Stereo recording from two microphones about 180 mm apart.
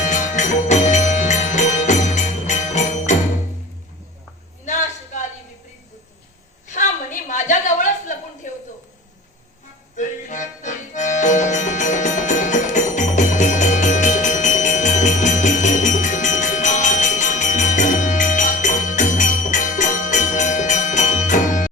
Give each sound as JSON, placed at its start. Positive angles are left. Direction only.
{"t": 0.0, "sound": "music", "side_deg": 45}
{"t": 4.6, "sound": "a sound", "side_deg": 40}
{"t": 6.7, "sound": "chuckle", "side_deg": 45}
{"t": 9.9, "sound": "music", "side_deg": 45}